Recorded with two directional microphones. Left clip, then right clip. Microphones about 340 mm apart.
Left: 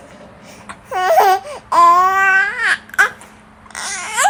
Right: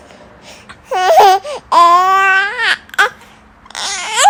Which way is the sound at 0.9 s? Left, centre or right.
Right.